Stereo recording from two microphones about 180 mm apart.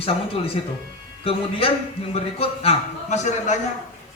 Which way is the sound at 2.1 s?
35° left (ahead or behind).